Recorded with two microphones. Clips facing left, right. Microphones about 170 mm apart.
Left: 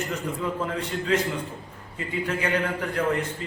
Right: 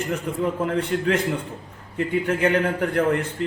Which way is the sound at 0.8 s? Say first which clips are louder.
Right 2 dB; 60° right (ahead or behind).